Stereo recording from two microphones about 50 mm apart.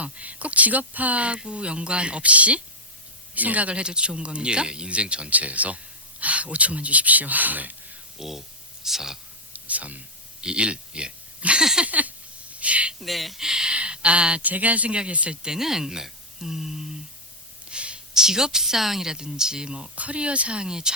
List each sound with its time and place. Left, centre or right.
0.0 s speech: right
8.2 s speech: centre
9.5 s a sound: right
10.4 s speech: right
11.6 s speech: centre
11.9 s a sound: right
13.0 s speech: centre
13.4 s speech: centre
14.4 s speech: right
15.4 s speech: centre
17.7 s a sound: right
18.2 s speech: centre